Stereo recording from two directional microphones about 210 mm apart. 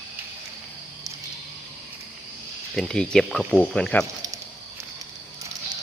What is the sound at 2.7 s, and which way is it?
Speech, 5° left (ahead or behind).